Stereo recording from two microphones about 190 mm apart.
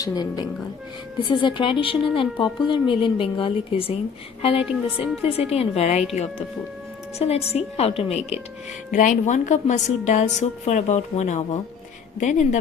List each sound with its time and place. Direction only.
0.0 s a woman's voice: 20° left (ahead or behind)
4.6 s speech: 5° right (ahead or behind)
5.5 s a woman's voice: 35° left (ahead or behind)
7.2 s a woman's voice: 35° left (ahead or behind)